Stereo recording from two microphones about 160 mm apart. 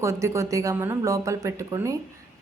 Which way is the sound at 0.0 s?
20° right (ahead or behind).